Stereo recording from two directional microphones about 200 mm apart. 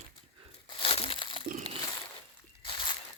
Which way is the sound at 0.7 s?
30° left (ahead or behind).